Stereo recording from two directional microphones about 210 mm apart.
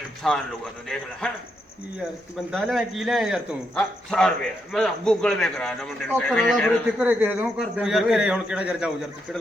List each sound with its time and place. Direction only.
0.2 s a man's voice: centre (ahead or behind)
2.5 s a man's voice: centre (ahead or behind)
7.0 s a man's voice: 10° right (ahead or behind)